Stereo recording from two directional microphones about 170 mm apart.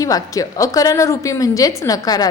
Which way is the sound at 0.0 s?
20° left (ahead or behind).